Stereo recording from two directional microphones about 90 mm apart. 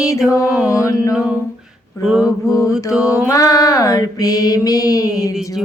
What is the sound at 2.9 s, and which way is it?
Mantra, 10° right (ahead or behind).